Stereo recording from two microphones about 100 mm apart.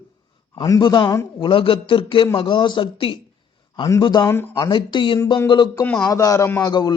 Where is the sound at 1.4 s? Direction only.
65° left (ahead or behind).